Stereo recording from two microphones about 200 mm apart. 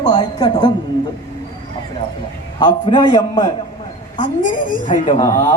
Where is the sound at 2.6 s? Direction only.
25° left (ahead or behind).